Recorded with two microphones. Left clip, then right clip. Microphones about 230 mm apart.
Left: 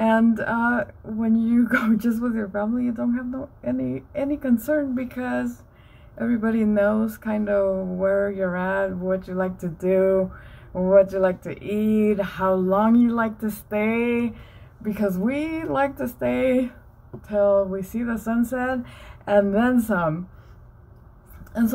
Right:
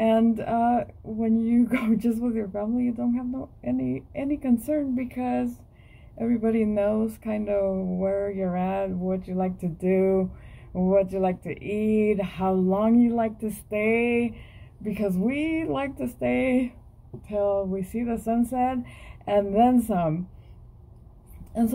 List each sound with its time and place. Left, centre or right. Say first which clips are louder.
0.0 s speech: left 2 dB; left
17.9 s speech: right 1 dB; left